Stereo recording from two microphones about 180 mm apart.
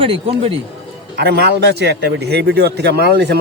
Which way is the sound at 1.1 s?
65° right (ahead or behind).